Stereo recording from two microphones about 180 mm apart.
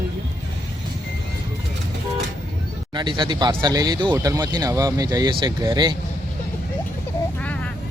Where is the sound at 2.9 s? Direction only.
25° right (ahead or behind).